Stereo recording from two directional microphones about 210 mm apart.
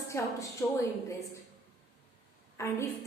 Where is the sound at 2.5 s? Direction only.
15° left (ahead or behind).